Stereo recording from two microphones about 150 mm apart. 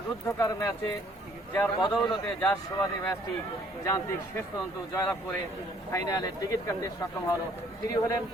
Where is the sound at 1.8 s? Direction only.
30° left (ahead or behind).